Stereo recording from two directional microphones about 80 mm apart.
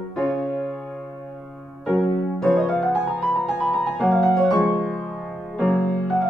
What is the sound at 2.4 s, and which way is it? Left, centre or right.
Music, centre.